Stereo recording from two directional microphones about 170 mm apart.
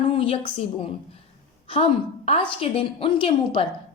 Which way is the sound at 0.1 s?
35° left (ahead or behind).